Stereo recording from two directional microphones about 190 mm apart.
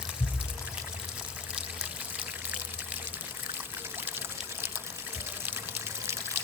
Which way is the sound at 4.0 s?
10° right (ahead or behind).